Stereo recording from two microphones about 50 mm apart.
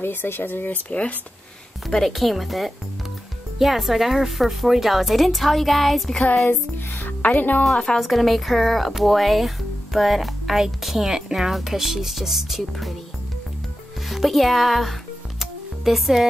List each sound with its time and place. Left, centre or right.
0.0 s speech: left
0.7 s speech: left
1.9 s a woman's voice: centre
6.4 s speech: left
7.7 s a woman's voice: centre
8.0 s a woman's voice: centre
14.0 s music: centre